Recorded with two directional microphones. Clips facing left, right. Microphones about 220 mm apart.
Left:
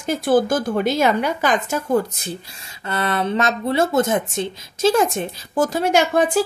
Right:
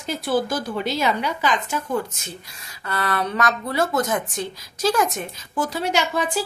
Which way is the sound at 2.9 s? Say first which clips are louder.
Left 3 dB; 25° left (ahead or behind).